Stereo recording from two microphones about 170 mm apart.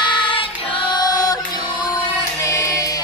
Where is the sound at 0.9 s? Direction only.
25° left (ahead or behind).